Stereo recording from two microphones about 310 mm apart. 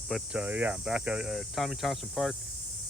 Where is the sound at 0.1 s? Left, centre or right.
Centre.